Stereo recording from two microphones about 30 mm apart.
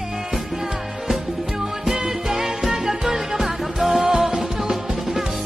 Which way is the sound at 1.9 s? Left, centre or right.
Centre.